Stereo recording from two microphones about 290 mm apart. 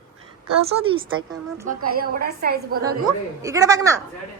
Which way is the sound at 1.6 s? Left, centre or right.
Right.